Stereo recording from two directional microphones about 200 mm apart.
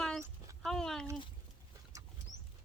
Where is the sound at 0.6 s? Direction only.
Centre (ahead or behind).